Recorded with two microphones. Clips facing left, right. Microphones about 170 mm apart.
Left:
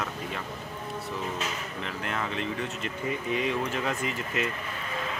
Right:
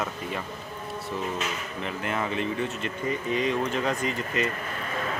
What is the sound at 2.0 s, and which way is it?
Speech, 5° right (ahead or behind).